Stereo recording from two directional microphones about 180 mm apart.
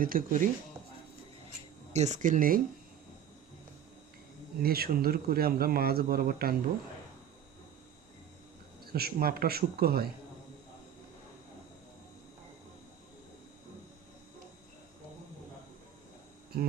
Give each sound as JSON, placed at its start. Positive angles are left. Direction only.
{"t": 0.0, "sound": "speech", "side_deg": -50}
{"t": 1.9, "sound": "speech", "side_deg": -40}
{"t": 4.6, "sound": "speech", "side_deg": -55}
{"t": 8.8, "sound": "speech", "side_deg": -60}
{"t": 16.5, "sound": "hum", "side_deg": -55}